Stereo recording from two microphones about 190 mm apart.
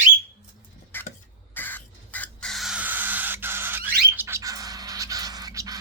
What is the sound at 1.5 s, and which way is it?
Crow, 10° left (ahead or behind).